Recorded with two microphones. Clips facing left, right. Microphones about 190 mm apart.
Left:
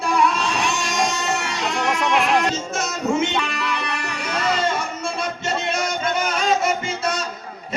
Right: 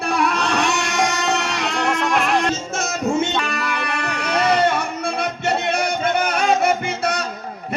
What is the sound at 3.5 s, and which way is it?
Music, 55° right (ahead or behind).